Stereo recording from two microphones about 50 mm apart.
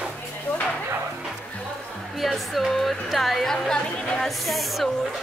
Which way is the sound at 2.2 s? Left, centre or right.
Centre.